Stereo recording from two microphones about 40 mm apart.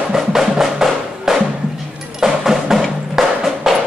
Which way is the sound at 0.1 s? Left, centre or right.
Centre.